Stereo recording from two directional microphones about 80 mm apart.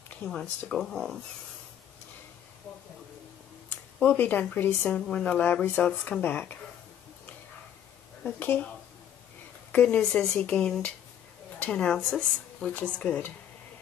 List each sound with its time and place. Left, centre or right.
0.2 s speech: centre
3.7 s speech: left
8.2 s speech: centre
9.7 s speech: centre